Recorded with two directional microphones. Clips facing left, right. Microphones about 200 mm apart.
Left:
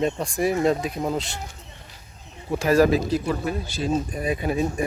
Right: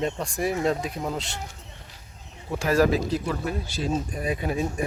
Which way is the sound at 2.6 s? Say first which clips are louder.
Left 3 dB; 15° left (ahead or behind).